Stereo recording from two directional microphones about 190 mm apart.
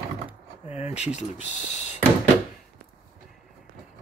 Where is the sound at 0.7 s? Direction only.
35° left (ahead or behind).